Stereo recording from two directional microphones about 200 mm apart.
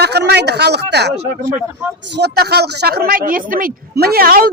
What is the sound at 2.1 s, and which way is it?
Speech, 55° right (ahead or behind).